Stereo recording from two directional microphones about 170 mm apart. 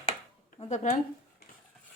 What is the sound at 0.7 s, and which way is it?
Speech, 45° left (ahead or behind).